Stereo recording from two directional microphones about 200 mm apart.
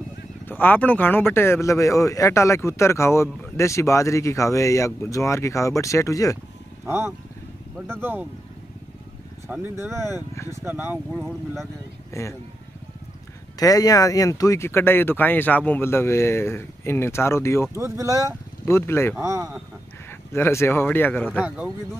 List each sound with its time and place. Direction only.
0.5 s speech: 10° left (ahead or behind)
6.9 s speech: 10° right (ahead or behind)
9.5 s speech: 10° right (ahead or behind)
10.1 s speech: 15° left (ahead or behind)
10.5 s speech: 10° right (ahead or behind)
11.1 s speech: 5° left (ahead or behind)
12.1 s speech: 15° left (ahead or behind)
13.6 s speech: 20° left (ahead or behind)
17.7 s speech: 15° right (ahead or behind)
18.7 s speech: 10° left (ahead or behind)
19.1 s speech: 15° right (ahead or behind)
20.1 s a man's voice: 10° left (ahead or behind)
21.3 s speech: 5° right (ahead or behind)